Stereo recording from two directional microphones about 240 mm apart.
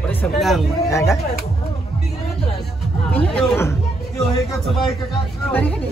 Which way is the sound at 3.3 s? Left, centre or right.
Centre.